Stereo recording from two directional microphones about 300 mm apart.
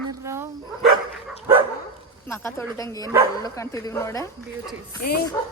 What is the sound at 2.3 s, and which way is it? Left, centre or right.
Speech, centre.